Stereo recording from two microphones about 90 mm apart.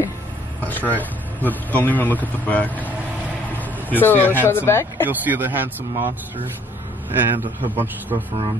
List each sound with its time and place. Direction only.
0.7 s speech: 20° left (ahead or behind)
5.0 s speech: 20° right (ahead or behind)